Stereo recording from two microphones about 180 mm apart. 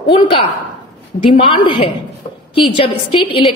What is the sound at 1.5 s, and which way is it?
Speech, 30° left (ahead or behind).